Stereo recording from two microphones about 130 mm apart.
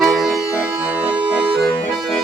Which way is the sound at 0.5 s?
10° right (ahead or behind).